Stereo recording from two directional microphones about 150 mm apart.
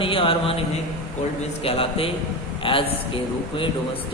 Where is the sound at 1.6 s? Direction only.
40° left (ahead or behind).